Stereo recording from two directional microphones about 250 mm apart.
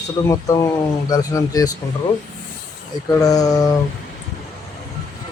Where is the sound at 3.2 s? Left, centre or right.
Centre.